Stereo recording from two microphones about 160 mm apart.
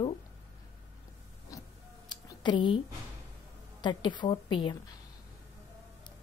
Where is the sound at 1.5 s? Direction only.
20° left (ahead or behind).